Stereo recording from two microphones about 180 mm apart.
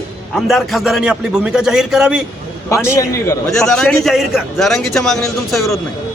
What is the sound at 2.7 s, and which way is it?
Speech, 15° left (ahead or behind).